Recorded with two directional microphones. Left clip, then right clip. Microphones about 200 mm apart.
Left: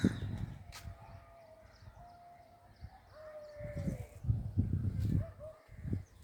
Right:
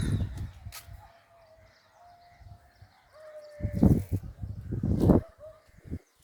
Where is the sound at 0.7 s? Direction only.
60° right (ahead or behind).